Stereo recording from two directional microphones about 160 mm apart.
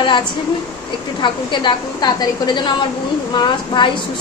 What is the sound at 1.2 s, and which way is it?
A woman's voice, 30° left (ahead or behind).